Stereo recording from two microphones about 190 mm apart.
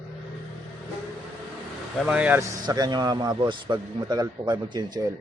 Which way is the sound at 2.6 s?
20° right (ahead or behind).